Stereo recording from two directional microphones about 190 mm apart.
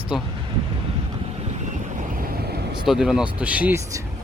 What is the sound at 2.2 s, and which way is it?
Vehicle, 50° right (ahead or behind).